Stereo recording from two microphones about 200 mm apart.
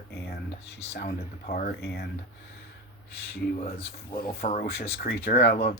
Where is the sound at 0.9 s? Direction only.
45° left (ahead or behind).